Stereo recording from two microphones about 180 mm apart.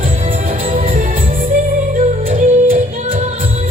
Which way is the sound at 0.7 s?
50° right (ahead or behind).